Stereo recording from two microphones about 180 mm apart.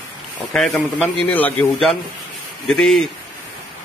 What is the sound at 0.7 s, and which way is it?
Speech, 10° left (ahead or behind).